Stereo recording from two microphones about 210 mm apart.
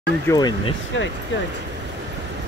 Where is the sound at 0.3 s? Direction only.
20° left (ahead or behind).